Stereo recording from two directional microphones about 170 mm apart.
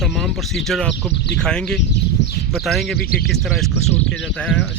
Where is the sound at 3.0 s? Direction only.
60° left (ahead or behind).